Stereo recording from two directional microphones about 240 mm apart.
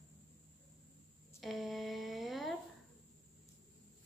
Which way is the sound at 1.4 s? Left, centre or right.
Centre.